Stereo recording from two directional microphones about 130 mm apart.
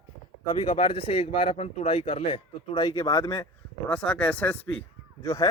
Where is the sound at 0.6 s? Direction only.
45° left (ahead or behind).